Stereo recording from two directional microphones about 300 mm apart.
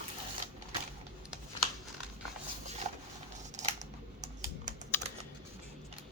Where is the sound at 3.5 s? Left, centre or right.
Right.